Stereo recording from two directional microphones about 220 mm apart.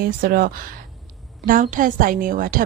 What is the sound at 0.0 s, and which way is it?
A woman's voice, 40° right (ahead or behind).